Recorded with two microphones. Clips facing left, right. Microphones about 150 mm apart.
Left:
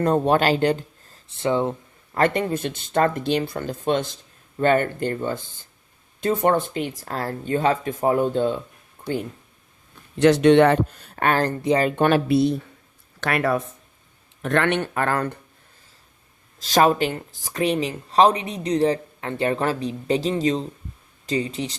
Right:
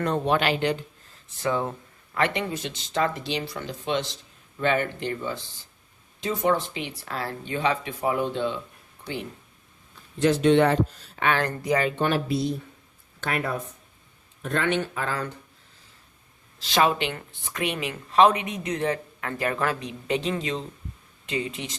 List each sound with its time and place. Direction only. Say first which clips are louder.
0.0 s speech: left 5 dB; 40° left (ahead or behind)
1.4 s speech: left 5 dB; 25° left (ahead or behind)
2.1 s speech: left 5 dB; 45° left (ahead or behind)
10.2 s speech: left 5 dB; 75° left (ahead or behind); by 11.5 s 40° left (ahead or behind)
11.9 s speech: left 6 dB; 60° left (ahead or behind)
13.1 s speech: left 6 dB; 80° left; by 15.4 s 60° left (ahead or behind)
16.6 s speech: left 5 dB; 40° left (ahead or behind)